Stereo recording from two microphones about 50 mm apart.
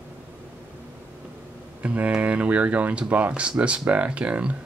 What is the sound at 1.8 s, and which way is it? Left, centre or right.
Speech, right.